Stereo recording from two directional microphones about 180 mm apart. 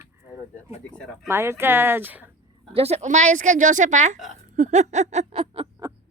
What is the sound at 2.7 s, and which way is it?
A woman's voice, 35° right (ahead or behind).